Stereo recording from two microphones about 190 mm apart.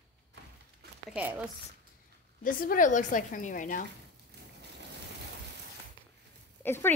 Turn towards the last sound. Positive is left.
turn(degrees=10)  # may be behind; listen again after turning